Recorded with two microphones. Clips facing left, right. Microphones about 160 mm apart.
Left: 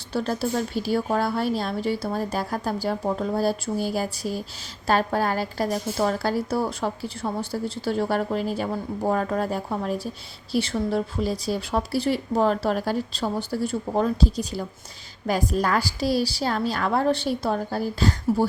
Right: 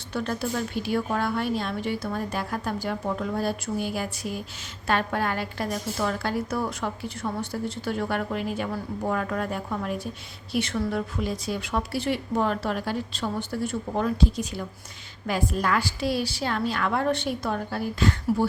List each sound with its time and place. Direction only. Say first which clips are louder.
0.1 s a woman's voice: left 3 dB; 35° left (ahead or behind)